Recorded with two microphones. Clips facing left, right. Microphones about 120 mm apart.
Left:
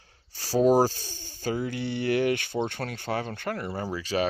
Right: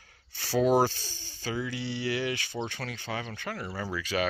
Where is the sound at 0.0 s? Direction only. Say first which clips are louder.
Even; 35° left (ahead or behind).